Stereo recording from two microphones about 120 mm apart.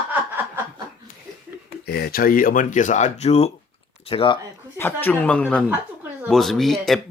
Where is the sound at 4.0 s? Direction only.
50° left (ahead or behind).